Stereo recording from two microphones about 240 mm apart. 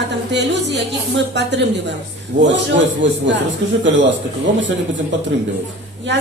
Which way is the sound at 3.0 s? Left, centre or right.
Right.